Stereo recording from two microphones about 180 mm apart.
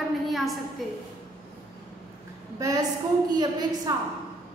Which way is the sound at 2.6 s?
20° right (ahead or behind).